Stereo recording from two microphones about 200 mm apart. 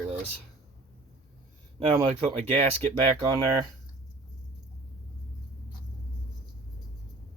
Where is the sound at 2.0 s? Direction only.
30° right (ahead or behind).